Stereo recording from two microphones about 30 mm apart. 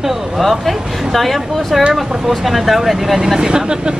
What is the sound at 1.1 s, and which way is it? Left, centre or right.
Speech, centre.